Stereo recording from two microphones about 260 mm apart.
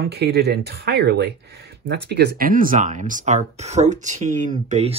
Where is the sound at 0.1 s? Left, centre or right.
Right.